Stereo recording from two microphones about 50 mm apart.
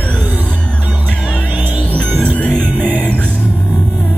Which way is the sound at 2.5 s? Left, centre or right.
Right.